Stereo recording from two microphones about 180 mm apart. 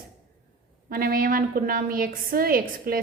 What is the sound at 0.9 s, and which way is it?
A woman's voice, 55° right (ahead or behind).